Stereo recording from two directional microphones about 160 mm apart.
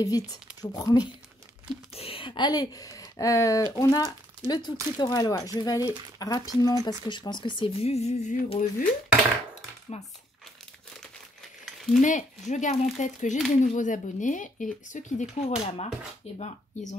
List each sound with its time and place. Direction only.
0.0 s speech: 25° left (ahead or behind)
2.0 s speech: 35° left (ahead or behind); by 8.8 s 55° left (ahead or behind)
9.9 s speech: 40° left (ahead or behind)
11.6 s a sound: centre (ahead or behind)
12.0 s speech: 50° left (ahead or behind)